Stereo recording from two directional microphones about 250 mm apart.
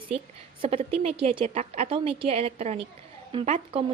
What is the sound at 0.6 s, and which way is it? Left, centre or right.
A woman's voice, right.